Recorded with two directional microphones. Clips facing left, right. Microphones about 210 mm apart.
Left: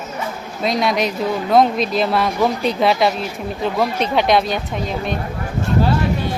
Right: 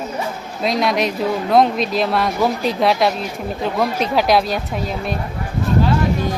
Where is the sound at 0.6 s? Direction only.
Centre (ahead or behind).